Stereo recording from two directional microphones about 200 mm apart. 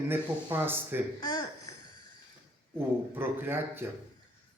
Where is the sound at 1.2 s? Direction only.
20° left (ahead or behind).